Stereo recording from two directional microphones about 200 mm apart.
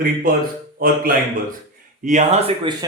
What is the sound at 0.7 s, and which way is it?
A man's voice, 45° right (ahead or behind).